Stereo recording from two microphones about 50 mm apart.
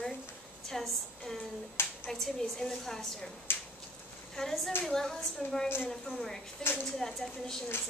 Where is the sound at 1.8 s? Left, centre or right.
Left.